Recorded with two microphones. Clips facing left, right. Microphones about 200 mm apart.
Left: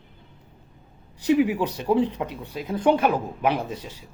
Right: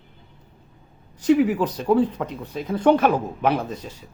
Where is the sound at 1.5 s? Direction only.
10° left (ahead or behind).